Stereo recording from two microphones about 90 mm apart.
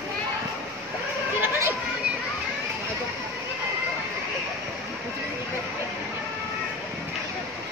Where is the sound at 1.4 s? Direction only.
25° right (ahead or behind).